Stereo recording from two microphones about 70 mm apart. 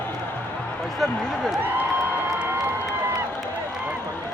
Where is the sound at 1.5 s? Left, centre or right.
Right.